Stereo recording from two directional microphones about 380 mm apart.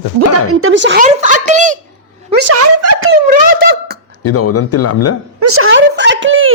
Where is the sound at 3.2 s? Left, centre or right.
Right.